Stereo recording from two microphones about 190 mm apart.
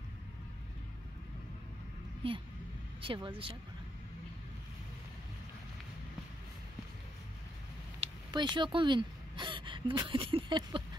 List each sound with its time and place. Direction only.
3.0 s speech: 25° right (ahead or behind)
8.0 s speech: 25° right (ahead or behind)